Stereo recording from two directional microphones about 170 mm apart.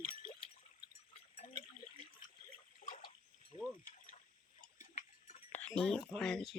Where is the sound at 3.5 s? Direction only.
35° left (ahead or behind).